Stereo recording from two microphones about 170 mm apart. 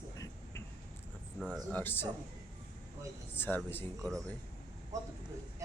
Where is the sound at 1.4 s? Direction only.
5° right (ahead or behind).